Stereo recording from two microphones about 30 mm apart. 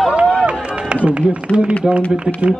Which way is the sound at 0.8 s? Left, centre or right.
Right.